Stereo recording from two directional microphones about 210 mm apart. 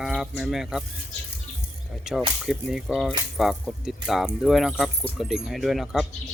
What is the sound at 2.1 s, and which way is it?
Speech, centre (ahead or behind).